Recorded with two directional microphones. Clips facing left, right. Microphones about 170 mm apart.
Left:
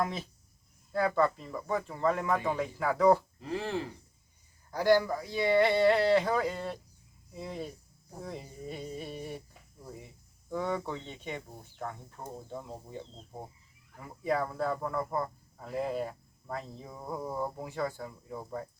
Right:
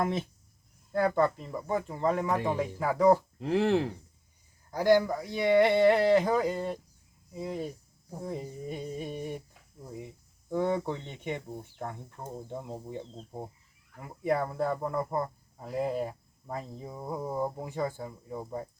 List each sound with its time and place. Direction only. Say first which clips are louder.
1.1 s speech: right 1 dB; 20° right (ahead or behind)
2.4 s speech: right 2 dB; centre (ahead or behind)
2.7 s speech: right 1 dB; 15° right (ahead or behind)
3.3 s speech: right 8 dB; 70° right (ahead or behind)
4.7 s speech: right 2 dB; 15° right (ahead or behind)
10.5 s speech: right 4 dB; 25° right (ahead or behind)
14.3 s speech: right 2 dB; 20° right (ahead or behind)